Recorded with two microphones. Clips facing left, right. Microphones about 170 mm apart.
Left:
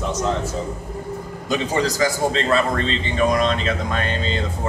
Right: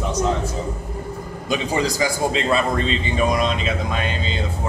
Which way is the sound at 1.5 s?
15° right (ahead or behind).